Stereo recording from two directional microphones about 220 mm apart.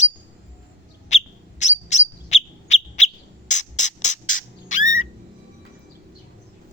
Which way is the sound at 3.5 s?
35° left (ahead or behind).